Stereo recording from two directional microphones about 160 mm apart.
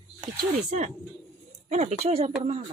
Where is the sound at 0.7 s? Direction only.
45° right (ahead or behind).